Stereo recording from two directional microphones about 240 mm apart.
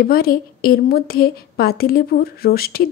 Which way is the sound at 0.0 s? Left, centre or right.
Left.